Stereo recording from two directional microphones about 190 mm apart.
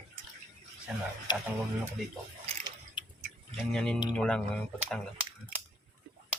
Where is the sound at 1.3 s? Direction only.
25° left (ahead or behind).